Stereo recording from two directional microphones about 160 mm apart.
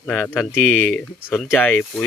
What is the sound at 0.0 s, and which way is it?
Speech, 5° left (ahead or behind).